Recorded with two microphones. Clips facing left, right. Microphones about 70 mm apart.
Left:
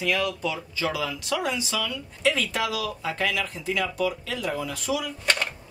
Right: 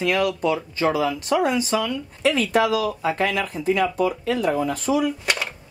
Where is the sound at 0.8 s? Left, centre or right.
Right.